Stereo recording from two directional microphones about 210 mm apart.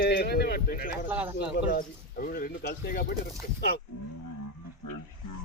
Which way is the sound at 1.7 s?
40° left (ahead or behind).